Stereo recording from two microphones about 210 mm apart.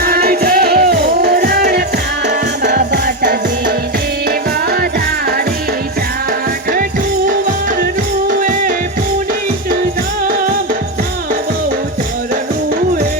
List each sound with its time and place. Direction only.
0.0 s music: 45° right (ahead or behind)
8.4 s music: 40° right (ahead or behind)